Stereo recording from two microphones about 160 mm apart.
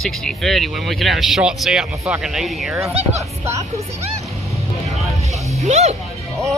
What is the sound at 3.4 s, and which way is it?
Speech, 15° right (ahead or behind).